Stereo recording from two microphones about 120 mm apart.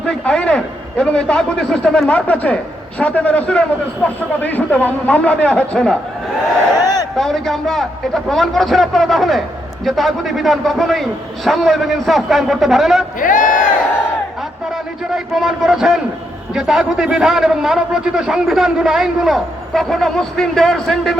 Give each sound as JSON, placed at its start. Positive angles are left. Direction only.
{"t": 0.0, "sound": "a man's voice", "side_deg": 5}
{"t": 7.2, "sound": "a man's voice", "side_deg": 5}
{"t": 13.1, "sound": "speech", "side_deg": 90}
{"t": 15.1, "sound": "a man's voice", "side_deg": -5}